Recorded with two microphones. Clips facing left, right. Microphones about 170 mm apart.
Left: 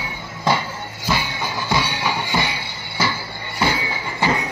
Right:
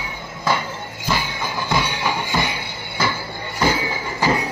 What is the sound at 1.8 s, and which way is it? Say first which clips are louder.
Music: even; 50° right (ahead or behind).